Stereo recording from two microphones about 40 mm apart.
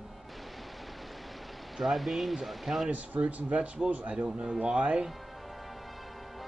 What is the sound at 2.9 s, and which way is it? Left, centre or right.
Speech, right.